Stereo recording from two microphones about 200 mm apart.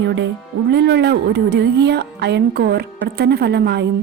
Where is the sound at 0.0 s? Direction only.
60° right (ahead or behind).